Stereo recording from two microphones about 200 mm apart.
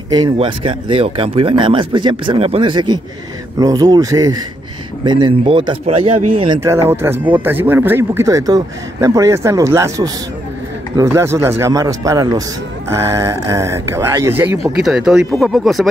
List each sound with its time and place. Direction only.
0.1 s speech: 25° right (ahead or behind)
6.6 s speech: 15° right (ahead or behind)